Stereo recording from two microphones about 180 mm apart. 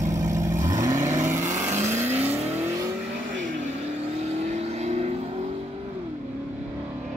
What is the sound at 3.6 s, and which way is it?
Vehicle, 40° right (ahead or behind).